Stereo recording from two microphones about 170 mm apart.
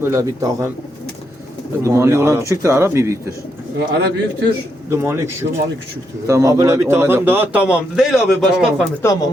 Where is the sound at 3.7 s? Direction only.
70° right (ahead or behind).